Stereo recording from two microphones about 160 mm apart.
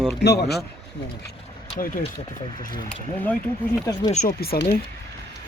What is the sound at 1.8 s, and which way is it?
Speech, 60° left (ahead or behind).